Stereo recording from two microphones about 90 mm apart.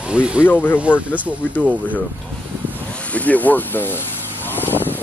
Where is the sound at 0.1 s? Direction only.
15° right (ahead or behind).